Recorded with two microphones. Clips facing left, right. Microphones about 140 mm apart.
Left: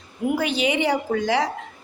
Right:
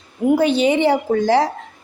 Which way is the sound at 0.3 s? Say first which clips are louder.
Right 7 dB; 30° right (ahead or behind).